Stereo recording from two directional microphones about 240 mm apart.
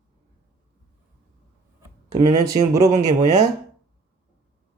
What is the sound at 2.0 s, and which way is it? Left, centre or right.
Speech, centre.